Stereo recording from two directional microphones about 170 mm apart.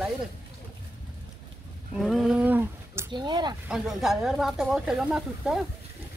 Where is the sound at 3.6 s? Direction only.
5° right (ahead or behind).